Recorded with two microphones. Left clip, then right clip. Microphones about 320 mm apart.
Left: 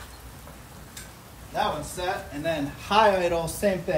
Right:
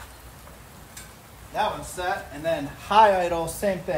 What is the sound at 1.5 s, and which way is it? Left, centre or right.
A man's voice, centre.